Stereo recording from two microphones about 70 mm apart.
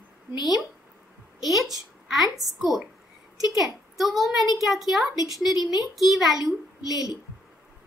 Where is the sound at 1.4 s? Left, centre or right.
Centre.